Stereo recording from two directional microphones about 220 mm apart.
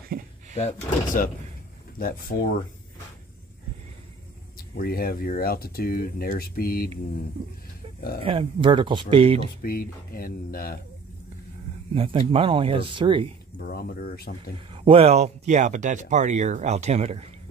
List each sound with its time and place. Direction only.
0.1 s a sound: 45° right (ahead or behind)
0.6 s speech: 30° left (ahead or behind)
4.6 s speech: 40° left (ahead or behind)
8.2 s speech: 25° right (ahead or behind)
9.6 s speech: 40° left (ahead or behind)
11.9 s speech: 25° right (ahead or behind)
13.6 s speech: 40° left (ahead or behind)
14.7 s speech: 25° right (ahead or behind)